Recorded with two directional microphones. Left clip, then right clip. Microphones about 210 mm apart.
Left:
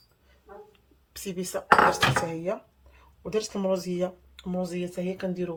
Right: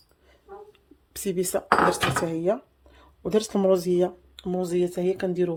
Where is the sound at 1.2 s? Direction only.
50° right (ahead or behind).